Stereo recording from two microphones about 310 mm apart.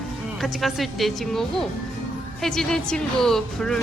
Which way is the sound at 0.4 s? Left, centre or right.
Centre.